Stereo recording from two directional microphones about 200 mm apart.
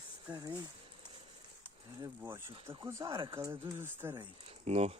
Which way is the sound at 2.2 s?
10° right (ahead or behind).